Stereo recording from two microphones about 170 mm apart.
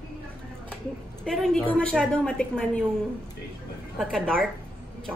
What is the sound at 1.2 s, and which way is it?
A woman's voice, 5° left (ahead or behind).